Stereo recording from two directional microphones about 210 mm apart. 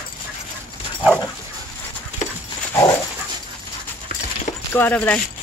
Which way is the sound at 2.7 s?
20° left (ahead or behind).